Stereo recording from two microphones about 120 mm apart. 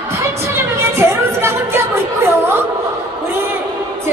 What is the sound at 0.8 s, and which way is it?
Music, 20° right (ahead or behind).